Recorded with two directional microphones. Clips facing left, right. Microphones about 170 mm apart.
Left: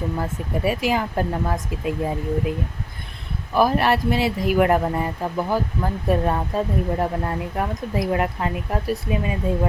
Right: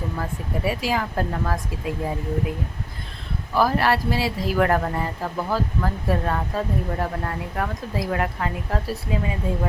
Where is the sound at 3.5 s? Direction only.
20° left (ahead or behind).